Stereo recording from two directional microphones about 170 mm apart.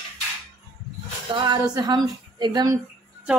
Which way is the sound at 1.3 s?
25° right (ahead or behind).